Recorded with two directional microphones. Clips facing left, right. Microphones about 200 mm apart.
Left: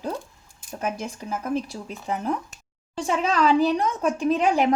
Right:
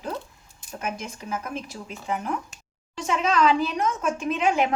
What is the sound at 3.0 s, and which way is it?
A woman's voice, 35° left (ahead or behind).